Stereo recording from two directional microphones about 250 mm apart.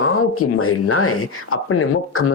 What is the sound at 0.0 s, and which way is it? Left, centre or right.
Speech, left.